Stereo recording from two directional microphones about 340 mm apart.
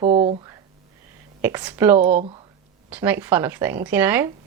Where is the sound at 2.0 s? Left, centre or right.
Right.